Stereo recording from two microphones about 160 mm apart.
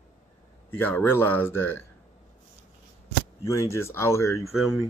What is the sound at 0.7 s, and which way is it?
Speech, 15° left (ahead or behind).